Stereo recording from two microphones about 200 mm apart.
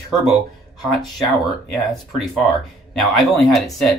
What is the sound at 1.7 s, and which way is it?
Speech, centre (ahead or behind).